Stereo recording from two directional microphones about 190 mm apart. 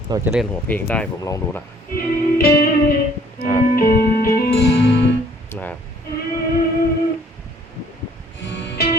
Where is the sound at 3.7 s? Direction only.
50° left (ahead or behind).